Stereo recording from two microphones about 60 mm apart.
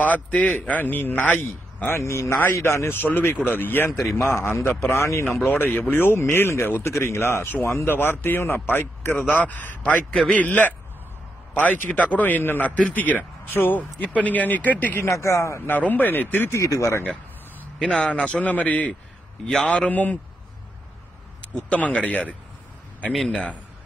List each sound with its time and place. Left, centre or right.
0.0 s a man's voice: left
3.0 s a man's voice: left
4.3 s speech: left
5.5 s a man's voice: left
15.0 s speech: left
15.7 s a man's voice: left
16.4 s speech: left
17.7 s speech: centre
19.4 s a man's voice: centre
19.9 s speech: left
21.6 s speech: left
23.1 s a man's voice: centre